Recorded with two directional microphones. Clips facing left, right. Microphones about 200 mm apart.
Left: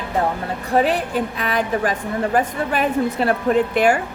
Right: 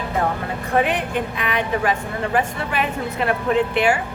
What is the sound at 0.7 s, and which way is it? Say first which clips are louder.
A woman's voice: left 2 dB; 35° left (ahead or behind).